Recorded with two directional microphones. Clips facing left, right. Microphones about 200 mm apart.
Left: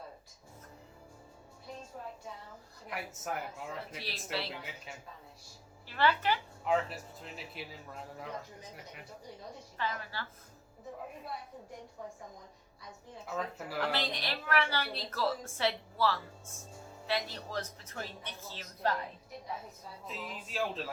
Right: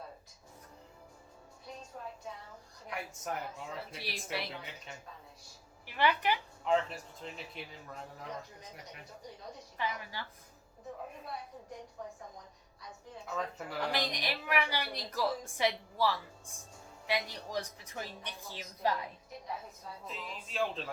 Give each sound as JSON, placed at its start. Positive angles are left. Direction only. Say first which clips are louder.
{"t": 2.9, "sound": "speech", "louder": "even", "side_deg": 5}
{"t": 3.9, "sound": "a woman's voice", "louder": "even", "side_deg": -15}
{"t": 5.8, "sound": "speech", "louder": "even", "side_deg": -15}
{"t": 6.7, "sound": "speech", "louder": "right 1 dB", "side_deg": 5}
{"t": 9.7, "sound": "a woman's voice", "louder": "even", "side_deg": -15}
{"t": 13.3, "sound": "speech", "louder": "left 1 dB", "side_deg": 5}
{"t": 13.8, "sound": "a woman's voice", "louder": "right 1 dB", "side_deg": -15}
{"t": 20.1, "sound": "speech", "louder": "left 3 dB", "side_deg": 0}